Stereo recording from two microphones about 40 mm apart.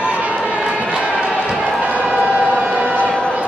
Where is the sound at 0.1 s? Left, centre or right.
Right.